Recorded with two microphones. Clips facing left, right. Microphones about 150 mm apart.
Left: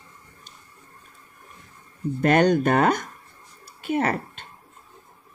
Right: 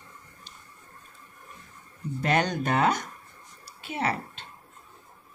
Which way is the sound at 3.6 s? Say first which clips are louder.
Left 7 dB; 50° left (ahead or behind).